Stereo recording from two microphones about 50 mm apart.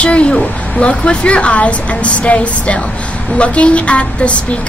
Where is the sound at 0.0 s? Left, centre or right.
Left.